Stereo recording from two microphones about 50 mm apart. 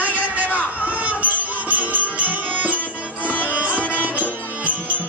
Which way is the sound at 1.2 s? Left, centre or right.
Right.